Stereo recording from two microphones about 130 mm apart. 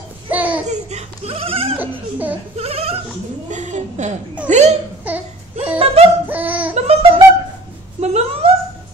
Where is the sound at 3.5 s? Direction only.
70° right (ahead or behind).